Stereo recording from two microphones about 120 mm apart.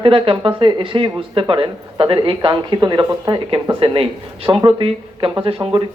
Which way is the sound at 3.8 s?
50° right (ahead or behind).